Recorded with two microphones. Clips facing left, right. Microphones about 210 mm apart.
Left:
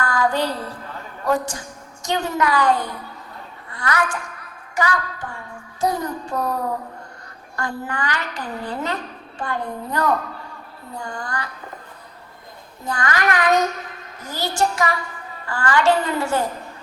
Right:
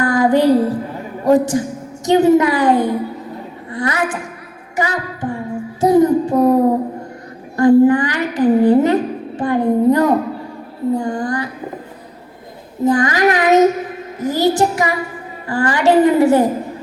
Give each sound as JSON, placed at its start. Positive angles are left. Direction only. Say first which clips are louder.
{"t": 0.0, "sound": "music", "louder": "right 9 dB", "side_deg": -20}
{"t": 0.6, "sound": "a man's voice", "louder": "right 13 dB", "side_deg": -20}
{"t": 12.8, "sound": "a woman's voice", "louder": "right 10 dB", "side_deg": -20}